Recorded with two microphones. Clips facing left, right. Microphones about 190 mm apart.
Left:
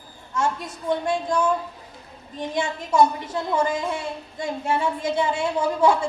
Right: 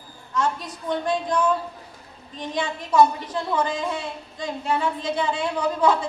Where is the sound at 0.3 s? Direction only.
25° left (ahead or behind).